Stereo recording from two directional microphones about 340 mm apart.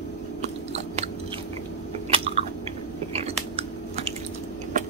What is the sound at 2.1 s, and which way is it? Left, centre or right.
Chewing, centre.